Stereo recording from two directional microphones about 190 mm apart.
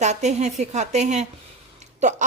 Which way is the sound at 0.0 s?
35° right (ahead or behind).